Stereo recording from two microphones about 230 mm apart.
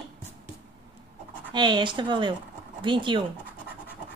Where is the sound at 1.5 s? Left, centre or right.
Centre.